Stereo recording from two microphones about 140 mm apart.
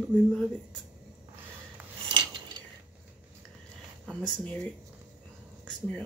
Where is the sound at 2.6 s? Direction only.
35° right (ahead or behind).